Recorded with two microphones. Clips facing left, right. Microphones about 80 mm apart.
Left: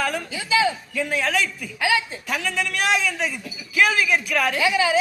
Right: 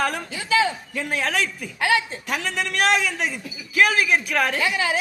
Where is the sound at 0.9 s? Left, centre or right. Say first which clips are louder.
Even; right.